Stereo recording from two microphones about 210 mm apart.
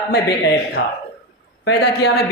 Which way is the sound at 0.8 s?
60° left (ahead or behind).